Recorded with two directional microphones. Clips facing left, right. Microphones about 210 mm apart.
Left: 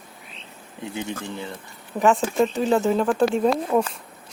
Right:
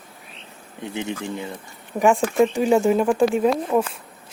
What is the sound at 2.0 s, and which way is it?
Speech, 10° right (ahead or behind).